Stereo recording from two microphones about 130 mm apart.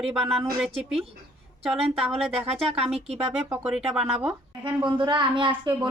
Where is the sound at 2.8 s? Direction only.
55° right (ahead or behind).